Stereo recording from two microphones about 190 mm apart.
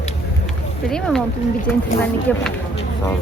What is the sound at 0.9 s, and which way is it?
Speech, 5° left (ahead or behind).